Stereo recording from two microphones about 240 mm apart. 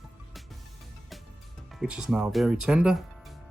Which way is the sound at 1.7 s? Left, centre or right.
Centre.